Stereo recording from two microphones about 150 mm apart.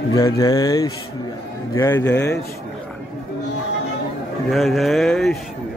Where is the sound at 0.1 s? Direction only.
25° left (ahead or behind).